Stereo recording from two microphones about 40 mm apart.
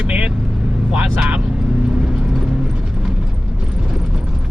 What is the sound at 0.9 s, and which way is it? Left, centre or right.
Vehicle, right.